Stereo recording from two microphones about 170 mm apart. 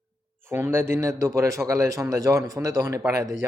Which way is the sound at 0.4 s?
15° right (ahead or behind).